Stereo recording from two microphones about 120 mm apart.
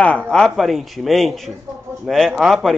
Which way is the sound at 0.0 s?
10° left (ahead or behind).